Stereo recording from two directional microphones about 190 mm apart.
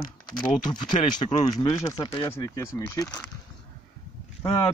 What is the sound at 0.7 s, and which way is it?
Speech, 25° left (ahead or behind).